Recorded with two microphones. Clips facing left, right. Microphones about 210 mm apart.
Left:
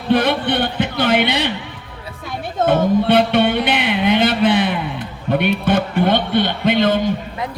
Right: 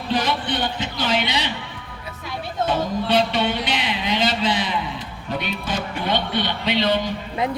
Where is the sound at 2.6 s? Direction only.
55° left (ahead or behind).